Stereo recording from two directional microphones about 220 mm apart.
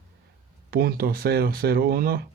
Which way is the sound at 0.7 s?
40° right (ahead or behind).